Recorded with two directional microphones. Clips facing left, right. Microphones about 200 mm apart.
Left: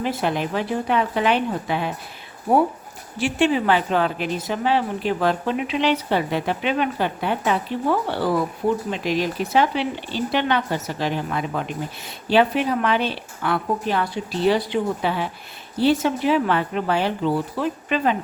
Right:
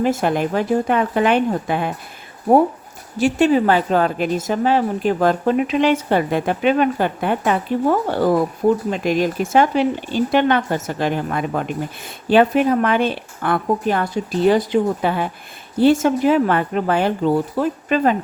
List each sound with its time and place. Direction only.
0.0 s a woman's voice: 45° right (ahead or behind)
3.2 s a woman's voice: 40° right (ahead or behind)